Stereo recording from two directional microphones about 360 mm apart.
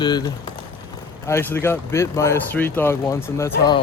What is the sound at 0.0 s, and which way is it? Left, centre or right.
Speech, centre.